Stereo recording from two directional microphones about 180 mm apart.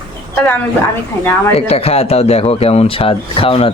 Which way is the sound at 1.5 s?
35° left (ahead or behind).